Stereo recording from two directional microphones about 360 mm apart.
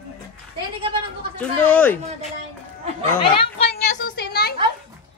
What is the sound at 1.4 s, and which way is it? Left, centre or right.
Speech, centre.